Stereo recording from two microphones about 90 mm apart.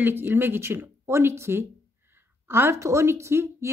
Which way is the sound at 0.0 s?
20° right (ahead or behind).